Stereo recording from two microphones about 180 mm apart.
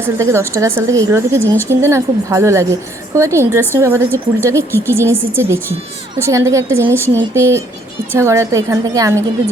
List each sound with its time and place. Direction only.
0.0 s a woman's voice: 15° right (ahead or behind)